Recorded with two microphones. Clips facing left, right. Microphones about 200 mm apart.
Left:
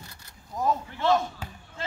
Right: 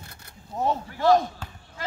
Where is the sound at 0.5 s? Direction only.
30° right (ahead or behind).